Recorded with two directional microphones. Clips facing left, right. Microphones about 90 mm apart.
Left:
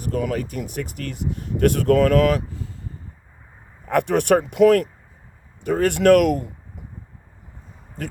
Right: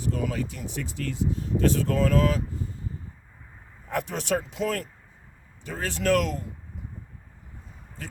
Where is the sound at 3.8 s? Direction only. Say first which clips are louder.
Left 11 dB; 65° left (ahead or behind).